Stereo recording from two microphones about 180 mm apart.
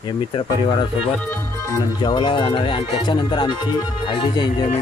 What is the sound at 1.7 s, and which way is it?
Speech, 25° left (ahead or behind).